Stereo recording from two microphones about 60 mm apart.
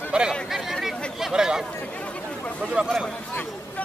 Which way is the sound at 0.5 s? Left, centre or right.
Centre.